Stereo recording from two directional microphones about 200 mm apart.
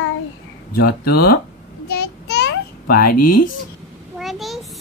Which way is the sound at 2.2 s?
55° left (ahead or behind).